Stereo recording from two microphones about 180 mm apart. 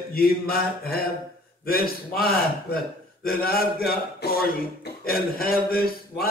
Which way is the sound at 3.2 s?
55° left (ahead or behind).